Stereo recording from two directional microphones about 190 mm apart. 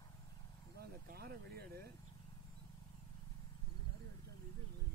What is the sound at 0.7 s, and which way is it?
Speech, 55° right (ahead or behind).